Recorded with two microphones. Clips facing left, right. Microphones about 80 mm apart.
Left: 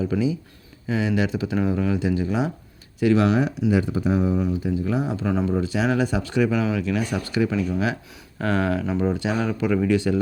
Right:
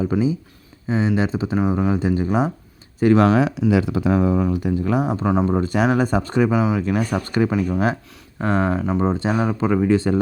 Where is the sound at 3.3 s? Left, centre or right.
Right.